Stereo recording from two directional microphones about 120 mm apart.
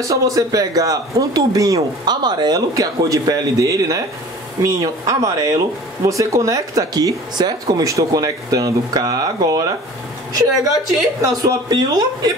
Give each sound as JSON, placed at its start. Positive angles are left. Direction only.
{"t": 0.0, "sound": "speech", "side_deg": -25}